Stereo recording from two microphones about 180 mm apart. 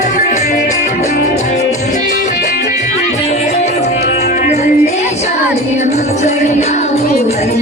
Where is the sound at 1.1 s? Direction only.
60° left (ahead or behind).